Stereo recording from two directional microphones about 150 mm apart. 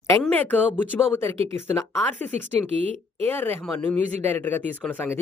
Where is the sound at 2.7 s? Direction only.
45° right (ahead or behind).